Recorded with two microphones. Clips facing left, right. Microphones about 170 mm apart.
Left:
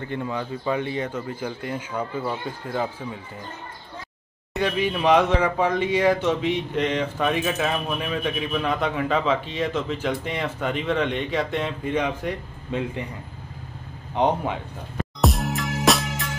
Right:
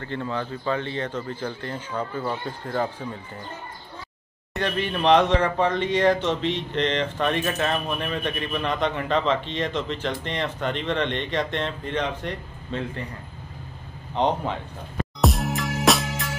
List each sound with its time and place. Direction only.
0.0 s speech: 15° left (ahead or behind)
4.6 s speech: 10° left (ahead or behind)
14.1 s speech: 10° left (ahead or behind)
15.2 s music: centre (ahead or behind)